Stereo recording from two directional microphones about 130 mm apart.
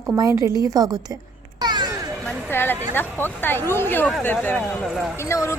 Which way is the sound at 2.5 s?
15° left (ahead or behind).